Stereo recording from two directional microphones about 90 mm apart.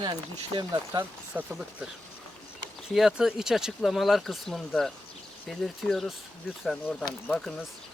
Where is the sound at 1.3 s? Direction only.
20° right (ahead or behind).